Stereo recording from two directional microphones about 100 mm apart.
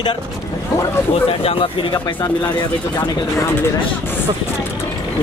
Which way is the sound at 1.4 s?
65° left (ahead or behind).